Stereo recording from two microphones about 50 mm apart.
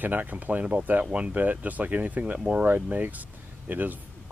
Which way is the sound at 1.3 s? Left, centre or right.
Right.